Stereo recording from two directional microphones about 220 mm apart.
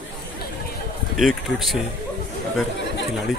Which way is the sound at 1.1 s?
Centre (ahead or behind).